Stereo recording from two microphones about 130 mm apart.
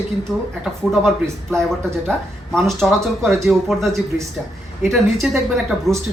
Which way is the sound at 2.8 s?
Centre (ahead or behind).